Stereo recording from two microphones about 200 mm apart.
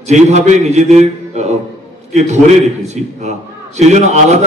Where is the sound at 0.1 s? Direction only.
35° right (ahead or behind).